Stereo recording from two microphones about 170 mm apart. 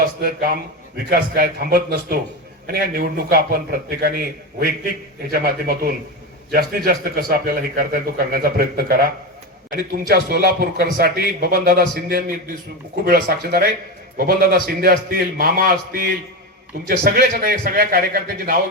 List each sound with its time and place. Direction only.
0.0 s a man's voice: 60° right (ahead or behind)